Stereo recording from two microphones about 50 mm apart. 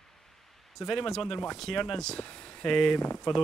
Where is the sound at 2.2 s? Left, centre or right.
Left.